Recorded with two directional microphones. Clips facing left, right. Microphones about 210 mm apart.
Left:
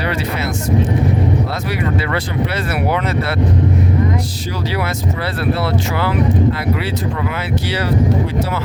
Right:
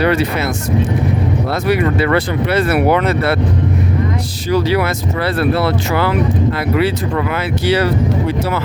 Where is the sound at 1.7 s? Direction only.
60° right (ahead or behind).